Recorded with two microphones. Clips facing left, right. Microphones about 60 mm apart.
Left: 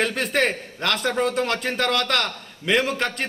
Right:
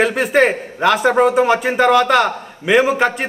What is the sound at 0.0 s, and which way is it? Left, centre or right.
A man's voice, centre.